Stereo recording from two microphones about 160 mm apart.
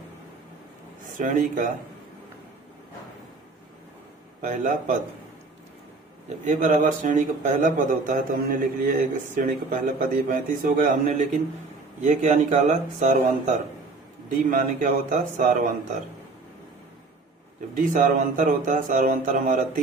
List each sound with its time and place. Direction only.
1.1 s speech: 55° right (ahead or behind)
4.4 s speech: 55° right (ahead or behind)
6.2 s speech: 50° right (ahead or behind)
12.0 s speech: 50° right (ahead or behind)
14.3 s speech: 60° right (ahead or behind)
17.7 s speech: 55° right (ahead or behind)